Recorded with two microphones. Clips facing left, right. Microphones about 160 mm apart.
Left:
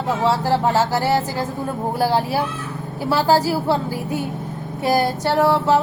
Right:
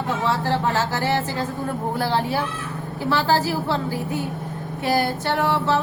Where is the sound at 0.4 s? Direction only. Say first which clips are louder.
Left 4 dB; 10° left (ahead or behind).